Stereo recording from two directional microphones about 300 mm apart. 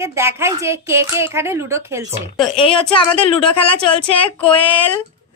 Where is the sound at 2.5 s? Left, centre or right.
Centre.